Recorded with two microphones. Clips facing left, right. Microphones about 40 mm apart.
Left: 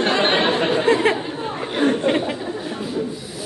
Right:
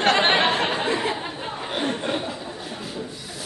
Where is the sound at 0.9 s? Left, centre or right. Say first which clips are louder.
Left 8 dB; left.